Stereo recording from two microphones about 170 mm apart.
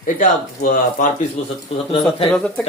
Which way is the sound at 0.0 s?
50° left (ahead or behind).